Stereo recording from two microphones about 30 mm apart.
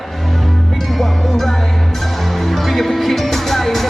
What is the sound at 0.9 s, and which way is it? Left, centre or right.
Music, centre.